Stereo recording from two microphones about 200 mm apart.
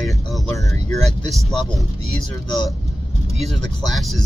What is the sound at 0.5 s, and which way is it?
Speech, 15° left (ahead or behind).